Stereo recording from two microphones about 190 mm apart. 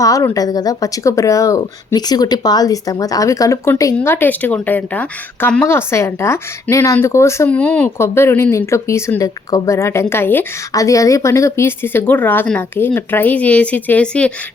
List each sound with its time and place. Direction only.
0.0 s speech: 15° left (ahead or behind)